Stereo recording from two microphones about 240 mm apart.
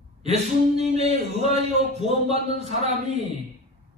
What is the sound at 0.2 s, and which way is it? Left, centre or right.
Speech, right.